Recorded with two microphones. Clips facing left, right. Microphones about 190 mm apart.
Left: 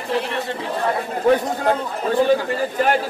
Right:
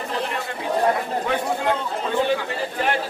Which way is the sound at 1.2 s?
40° left (ahead or behind).